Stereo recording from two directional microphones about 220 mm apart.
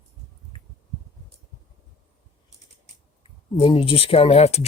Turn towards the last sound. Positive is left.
turn(degrees=30)  # may be behind; listen again after turning